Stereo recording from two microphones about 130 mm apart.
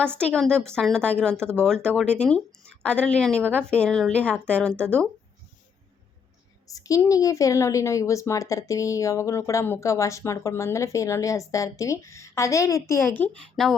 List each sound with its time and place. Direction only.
0.2 s a woman's voice: 5° left (ahead or behind)
6.7 s a woman's voice: 25° left (ahead or behind); by 13.7 s 5° left (ahead or behind)